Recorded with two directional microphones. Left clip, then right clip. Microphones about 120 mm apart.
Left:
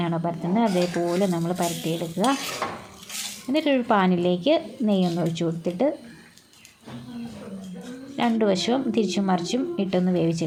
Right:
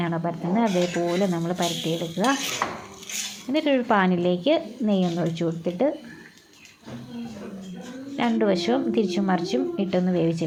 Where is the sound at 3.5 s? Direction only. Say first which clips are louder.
Even; 25° left (ahead or behind).